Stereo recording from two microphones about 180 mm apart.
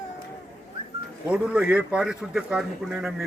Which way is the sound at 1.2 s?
5° right (ahead or behind).